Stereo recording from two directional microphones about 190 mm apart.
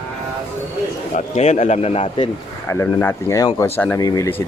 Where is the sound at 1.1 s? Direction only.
35° left (ahead or behind).